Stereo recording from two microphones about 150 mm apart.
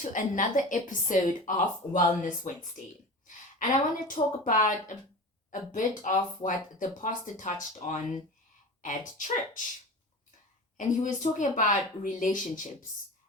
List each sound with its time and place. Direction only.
0.0 s a woman's voice: 60° left (ahead or behind)
4.1 s a woman's voice: 65° left (ahead or behind)
10.8 s a woman's voice: 60° left (ahead or behind)